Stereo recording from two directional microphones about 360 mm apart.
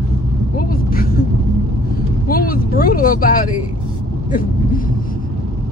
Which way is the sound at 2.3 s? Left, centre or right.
Left.